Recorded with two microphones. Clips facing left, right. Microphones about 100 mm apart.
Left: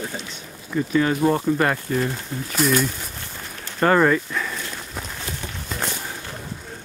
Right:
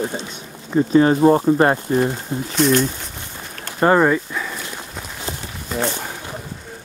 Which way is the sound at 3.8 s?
20° right (ahead or behind).